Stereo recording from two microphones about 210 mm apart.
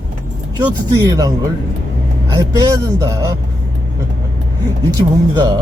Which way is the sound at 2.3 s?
15° right (ahead or behind).